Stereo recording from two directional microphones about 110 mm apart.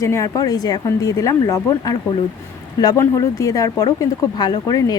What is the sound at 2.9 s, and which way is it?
Speech, 30° left (ahead or behind).